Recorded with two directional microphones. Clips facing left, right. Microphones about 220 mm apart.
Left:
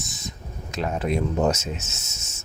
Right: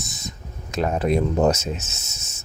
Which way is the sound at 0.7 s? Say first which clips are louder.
Right 4 dB; 45° right (ahead or behind).